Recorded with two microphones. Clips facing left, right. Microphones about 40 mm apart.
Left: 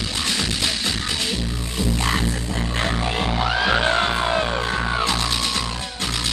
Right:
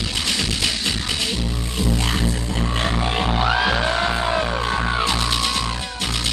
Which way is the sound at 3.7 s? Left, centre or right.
Centre.